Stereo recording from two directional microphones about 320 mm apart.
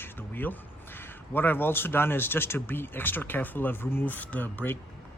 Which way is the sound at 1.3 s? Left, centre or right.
Centre.